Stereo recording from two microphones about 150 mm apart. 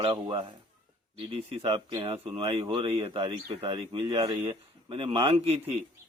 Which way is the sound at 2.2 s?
35° right (ahead or behind).